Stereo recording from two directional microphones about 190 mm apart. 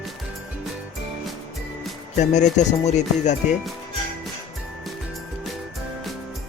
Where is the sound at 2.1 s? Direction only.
40° left (ahead or behind).